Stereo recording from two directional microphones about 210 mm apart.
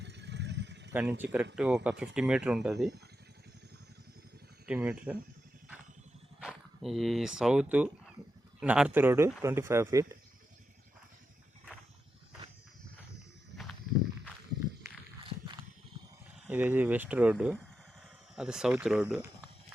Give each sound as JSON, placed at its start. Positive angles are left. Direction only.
{"t": 0.0, "sound": "vehicle", "side_deg": -55}
{"t": 0.9, "sound": "speech", "side_deg": -10}
{"t": 4.6, "sound": "speech", "side_deg": -5}
{"t": 6.4, "sound": "speech", "side_deg": 0}
{"t": 13.5, "sound": "wild animals", "side_deg": -50}
{"t": 16.5, "sound": "speech", "side_deg": -10}